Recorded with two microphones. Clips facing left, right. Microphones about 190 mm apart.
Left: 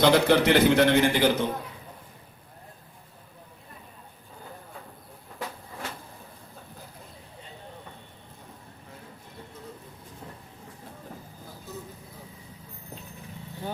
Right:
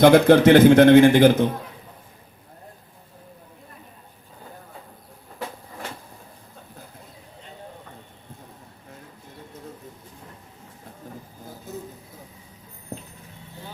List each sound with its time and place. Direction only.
0.0 s a man's voice: 50° right (ahead or behind)